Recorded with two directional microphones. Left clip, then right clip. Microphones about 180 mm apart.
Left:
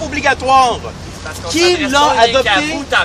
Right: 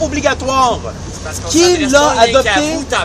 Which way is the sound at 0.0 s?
Centre (ahead or behind).